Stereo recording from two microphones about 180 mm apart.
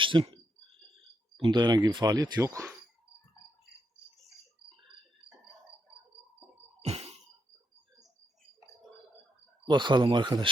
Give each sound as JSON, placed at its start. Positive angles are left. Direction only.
{"t": 0.0, "sound": "speech", "side_deg": -30}
{"t": 1.4, "sound": "speech", "side_deg": -25}
{"t": 9.6, "sound": "speech", "side_deg": -25}